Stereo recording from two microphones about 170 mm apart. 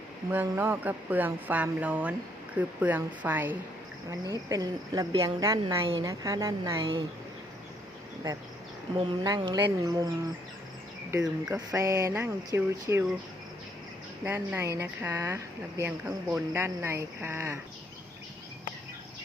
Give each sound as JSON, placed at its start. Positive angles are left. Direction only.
{"t": 0.4, "sound": "speech", "side_deg": -15}
{"t": 4.3, "sound": "speech", "side_deg": -20}
{"t": 5.8, "sound": "a woman's voice", "side_deg": -30}
{"t": 6.1, "sound": "speech", "side_deg": -20}
{"t": 9.0, "sound": "speech", "side_deg": -25}
{"t": 11.2, "sound": "speech", "side_deg": -5}
{"t": 11.8, "sound": "speech", "side_deg": -20}
{"t": 14.3, "sound": "speech", "side_deg": -15}